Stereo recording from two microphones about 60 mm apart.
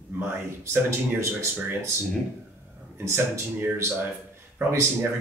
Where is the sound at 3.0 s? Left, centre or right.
Right.